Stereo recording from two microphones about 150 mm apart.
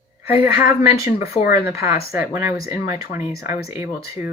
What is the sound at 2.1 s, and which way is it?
Speech, 15° right (ahead or behind).